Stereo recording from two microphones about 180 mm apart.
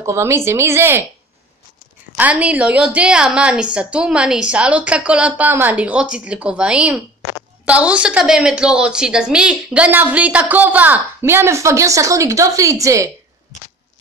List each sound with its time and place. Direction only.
0.0 s a woman's voice: 15° right (ahead or behind)
2.1 s a woman's voice: 10° right (ahead or behind)